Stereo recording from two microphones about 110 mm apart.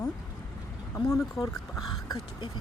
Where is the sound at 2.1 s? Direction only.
40° left (ahead or behind).